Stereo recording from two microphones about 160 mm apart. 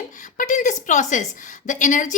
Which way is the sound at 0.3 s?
50° left (ahead or behind).